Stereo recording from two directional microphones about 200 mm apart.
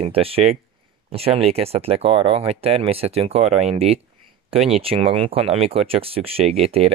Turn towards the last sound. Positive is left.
turn(degrees=-30)  # may be behind; listen again after turning